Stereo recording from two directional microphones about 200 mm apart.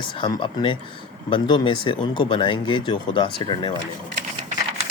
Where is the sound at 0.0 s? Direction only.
25° left (ahead or behind).